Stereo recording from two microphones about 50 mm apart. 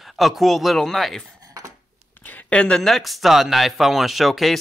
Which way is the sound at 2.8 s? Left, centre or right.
Centre.